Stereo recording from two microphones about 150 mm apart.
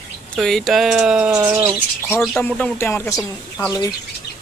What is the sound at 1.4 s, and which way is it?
Bird, 20° right (ahead or behind).